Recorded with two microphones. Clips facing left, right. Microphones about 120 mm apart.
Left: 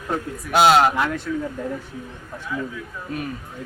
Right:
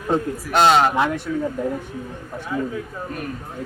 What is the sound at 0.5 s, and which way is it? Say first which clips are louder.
Speech: even; 5° left (ahead or behind).